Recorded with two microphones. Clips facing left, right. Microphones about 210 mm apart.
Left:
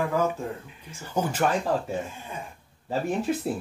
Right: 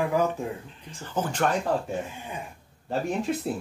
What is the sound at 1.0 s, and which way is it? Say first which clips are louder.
Speech: left 1 dB; 10° left (ahead or behind).